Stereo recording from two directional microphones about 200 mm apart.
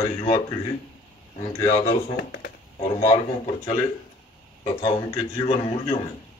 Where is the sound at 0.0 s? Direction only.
20° left (ahead or behind).